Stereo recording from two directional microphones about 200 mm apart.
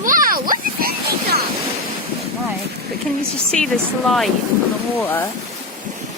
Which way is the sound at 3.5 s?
5° left (ahead or behind).